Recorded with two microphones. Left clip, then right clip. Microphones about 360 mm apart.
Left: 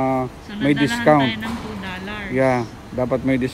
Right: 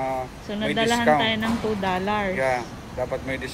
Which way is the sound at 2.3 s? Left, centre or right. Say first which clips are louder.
Left 5 dB; left.